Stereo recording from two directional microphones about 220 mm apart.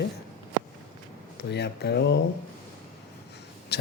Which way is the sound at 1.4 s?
50° left (ahead or behind).